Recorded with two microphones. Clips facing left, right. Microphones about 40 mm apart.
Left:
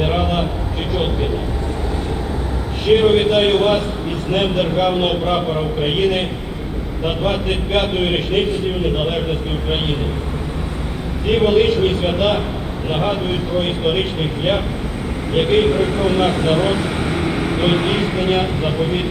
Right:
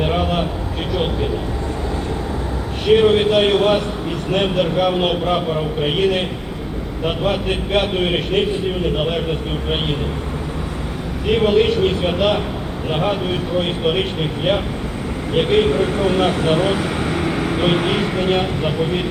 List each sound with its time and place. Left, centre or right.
0.0 s a sound: centre
0.9 s vehicle: centre
2.8 s a man's voice: centre
11.3 s a man's voice: centre
16.8 s vehicle: left
17.6 s a man's voice: centre